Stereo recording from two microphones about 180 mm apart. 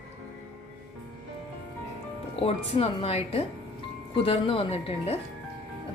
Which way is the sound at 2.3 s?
35° left (ahead or behind).